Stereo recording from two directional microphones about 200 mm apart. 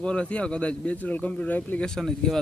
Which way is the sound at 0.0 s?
5° left (ahead or behind).